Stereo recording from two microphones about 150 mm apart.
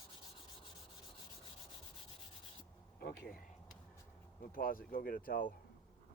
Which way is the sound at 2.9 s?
90° left.